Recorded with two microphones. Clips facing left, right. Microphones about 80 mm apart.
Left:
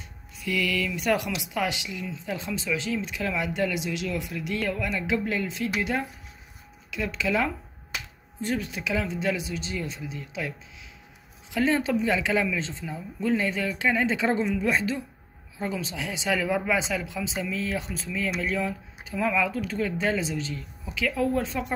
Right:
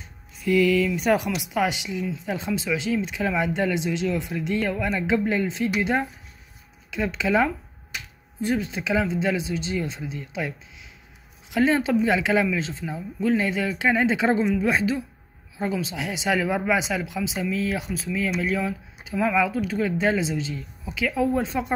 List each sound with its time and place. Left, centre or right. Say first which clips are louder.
0.5 s speech: right 8 dB; right
11.5 s speech: right 3 dB; centre